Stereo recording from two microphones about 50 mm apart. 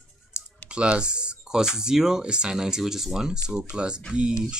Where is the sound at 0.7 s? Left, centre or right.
Centre.